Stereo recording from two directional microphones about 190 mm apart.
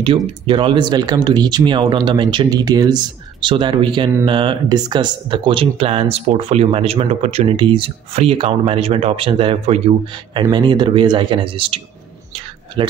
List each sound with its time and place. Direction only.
0.5 s speech: 25° right (ahead or behind)